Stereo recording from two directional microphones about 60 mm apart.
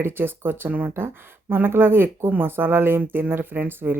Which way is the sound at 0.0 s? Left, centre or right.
Right.